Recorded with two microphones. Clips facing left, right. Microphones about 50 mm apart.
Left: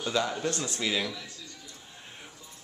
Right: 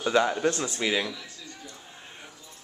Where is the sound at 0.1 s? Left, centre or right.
Right.